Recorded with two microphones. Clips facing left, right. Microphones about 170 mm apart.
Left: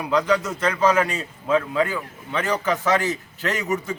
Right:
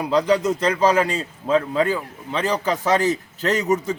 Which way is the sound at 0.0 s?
35° right (ahead or behind).